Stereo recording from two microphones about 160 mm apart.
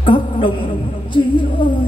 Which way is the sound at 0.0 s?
35° left (ahead or behind).